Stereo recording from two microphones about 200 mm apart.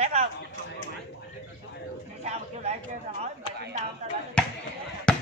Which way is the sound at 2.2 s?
30° right (ahead or behind).